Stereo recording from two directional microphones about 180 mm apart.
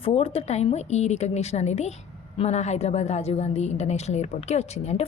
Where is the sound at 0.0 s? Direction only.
30° left (ahead or behind).